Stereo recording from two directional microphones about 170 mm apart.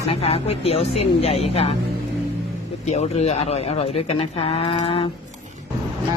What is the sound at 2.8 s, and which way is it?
Speech, 40° left (ahead or behind).